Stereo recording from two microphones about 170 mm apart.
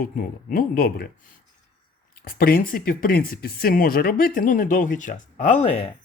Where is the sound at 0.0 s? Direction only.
55° left (ahead or behind).